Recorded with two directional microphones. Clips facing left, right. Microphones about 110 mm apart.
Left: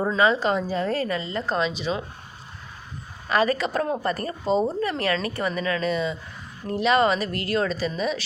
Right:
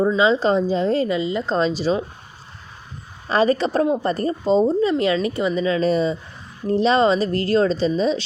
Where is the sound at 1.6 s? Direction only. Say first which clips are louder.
Right 8 dB; 35° right (ahead or behind).